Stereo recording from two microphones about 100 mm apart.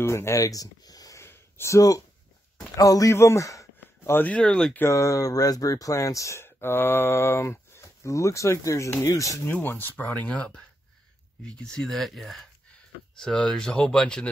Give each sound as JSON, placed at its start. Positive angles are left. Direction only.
{"t": 0.0, "sound": "speech", "side_deg": 25}
{"t": 4.3, "sound": "speech", "side_deg": 10}
{"t": 4.7, "sound": "speech", "side_deg": 30}